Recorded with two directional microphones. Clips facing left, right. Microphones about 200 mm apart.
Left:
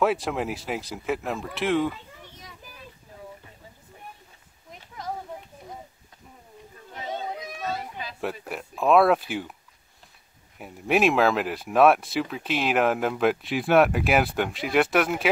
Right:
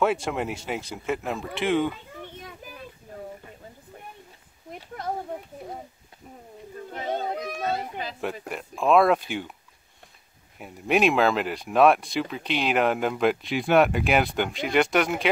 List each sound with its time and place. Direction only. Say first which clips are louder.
0.0 s speech: even; centre (ahead or behind)
4.6 s a sound: right 3 dB; 60° right (ahead or behind)
6.9 s children playing: right 4 dB; 55° right (ahead or behind)
8.2 s speech: left 3 dB; centre (ahead or behind)
10.6 s speech: even; centre (ahead or behind)